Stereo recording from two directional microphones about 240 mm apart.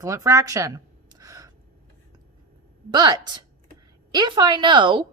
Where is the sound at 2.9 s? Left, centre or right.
Centre.